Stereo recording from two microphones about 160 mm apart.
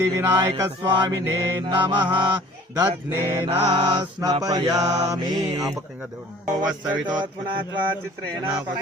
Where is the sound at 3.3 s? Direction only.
25° right (ahead or behind).